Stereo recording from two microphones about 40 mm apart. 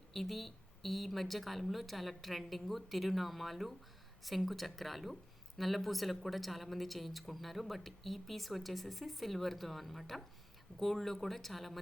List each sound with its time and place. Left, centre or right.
0.1 s speech: centre